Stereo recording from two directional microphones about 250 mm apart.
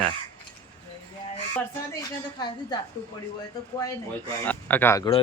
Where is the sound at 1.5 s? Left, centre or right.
Centre.